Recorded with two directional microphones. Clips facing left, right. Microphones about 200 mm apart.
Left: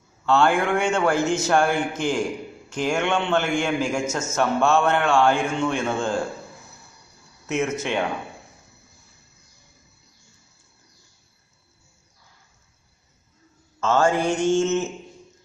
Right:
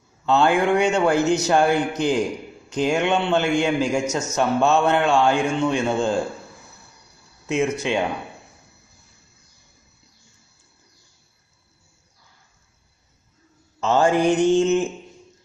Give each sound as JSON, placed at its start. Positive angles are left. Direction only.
{"t": 0.2, "sound": "a man's voice", "side_deg": -15}
{"t": 7.4, "sound": "a man's voice", "side_deg": -15}
{"t": 13.7, "sound": "a man's voice", "side_deg": -15}